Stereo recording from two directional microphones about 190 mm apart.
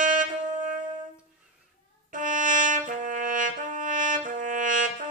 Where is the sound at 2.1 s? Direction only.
45° right (ahead or behind).